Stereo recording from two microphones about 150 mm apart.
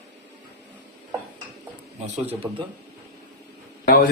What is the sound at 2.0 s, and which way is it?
Speech, 45° right (ahead or behind).